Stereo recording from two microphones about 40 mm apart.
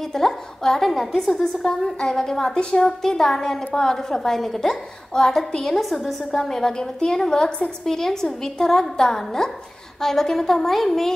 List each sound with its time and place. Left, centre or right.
0.1 s a woman's voice: centre
1.4 s a woman's voice: centre
5.8 s a woman's voice: centre